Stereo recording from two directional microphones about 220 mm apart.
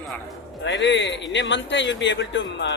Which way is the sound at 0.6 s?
55° left (ahead or behind).